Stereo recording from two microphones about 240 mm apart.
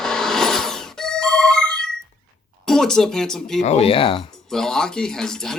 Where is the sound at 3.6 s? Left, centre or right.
Left.